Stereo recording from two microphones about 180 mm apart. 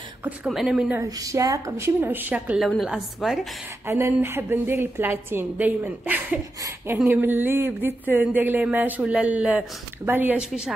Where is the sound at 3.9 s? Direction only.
15° right (ahead or behind).